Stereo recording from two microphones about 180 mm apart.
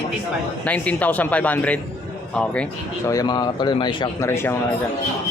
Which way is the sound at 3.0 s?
20° left (ahead or behind).